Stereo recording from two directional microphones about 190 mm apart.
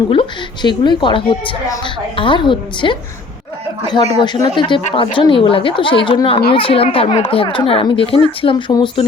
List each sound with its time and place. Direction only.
0.1 s a woman's voice: 25° left (ahead or behind)
4.1 s a woman's voice: 20° left (ahead or behind)
4.8 s a woman's voice: 35° left (ahead or behind)